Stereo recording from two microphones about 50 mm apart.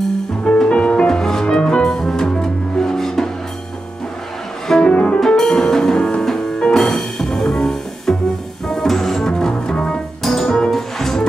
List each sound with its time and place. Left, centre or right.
0.4 s music: left
4.6 s music: centre
5.2 s music: centre